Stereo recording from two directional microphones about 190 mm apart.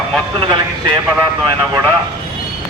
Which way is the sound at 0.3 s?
25° right (ahead or behind).